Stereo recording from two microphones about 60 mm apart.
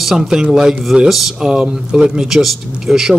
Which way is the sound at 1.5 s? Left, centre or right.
Centre.